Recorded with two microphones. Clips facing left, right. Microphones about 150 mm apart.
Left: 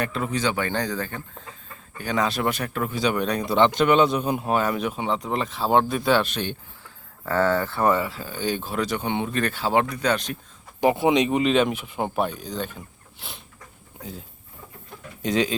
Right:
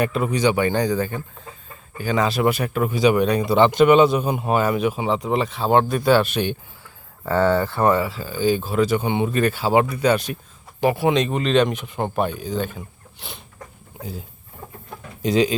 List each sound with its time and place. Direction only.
0.0 s speech: 10° right (ahead or behind)
7.8 s speech: 5° right (ahead or behind)
10.8 s speech: 20° left (ahead or behind); by 14.3 s 5° right (ahead or behind)
15.2 s speech: 35° right (ahead or behind)